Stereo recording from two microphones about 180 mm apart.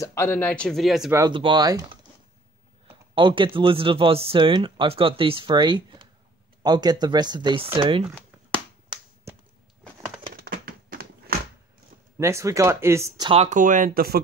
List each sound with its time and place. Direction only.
0.0 s speech: 15° left (ahead or behind); by 1.1 s centre (ahead or behind)
1.1 s speech: 25° right (ahead or behind)
3.2 s speech: 25° right (ahead or behind)
10.3 s a sound: 55° right (ahead or behind)
12.2 s speech: 15° right (ahead or behind)
13.3 s speech: 40° right (ahead or behind); by 14.2 s 55° right (ahead or behind)